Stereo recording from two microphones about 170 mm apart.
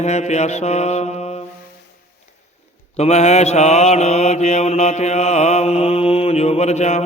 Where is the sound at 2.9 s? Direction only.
40° left (ahead or behind).